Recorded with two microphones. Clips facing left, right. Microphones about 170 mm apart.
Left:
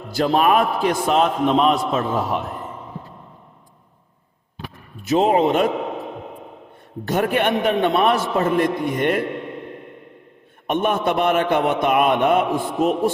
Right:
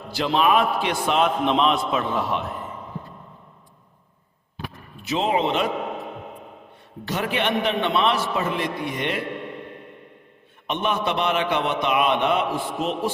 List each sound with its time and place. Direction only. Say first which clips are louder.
0.1 s a man's voice: left 3 dB; 45° left (ahead or behind)
5.0 s a man's voice: left 6 dB; 45° left (ahead or behind)
7.0 s a man's voice: left 5 dB; 50° left (ahead or behind)
10.7 s a man's voice: left 5 dB; 50° left (ahead or behind)